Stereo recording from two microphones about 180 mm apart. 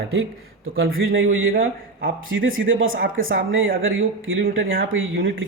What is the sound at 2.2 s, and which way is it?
Speech, 90° right.